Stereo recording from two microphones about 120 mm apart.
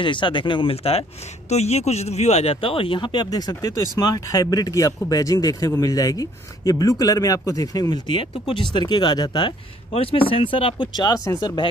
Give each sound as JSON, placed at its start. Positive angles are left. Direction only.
{"t": 0.0, "sound": "speech", "side_deg": 45}
{"t": 1.5, "sound": "speech", "side_deg": 65}
{"t": 9.9, "sound": "speech", "side_deg": 45}